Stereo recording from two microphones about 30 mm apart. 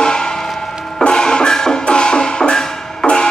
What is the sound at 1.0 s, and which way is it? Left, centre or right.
Music, left.